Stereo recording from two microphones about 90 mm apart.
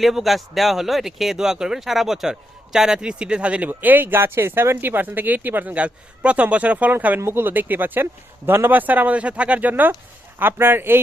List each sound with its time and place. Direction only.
0.0 s speech: centre (ahead or behind); by 11.0 s 25° right (ahead or behind)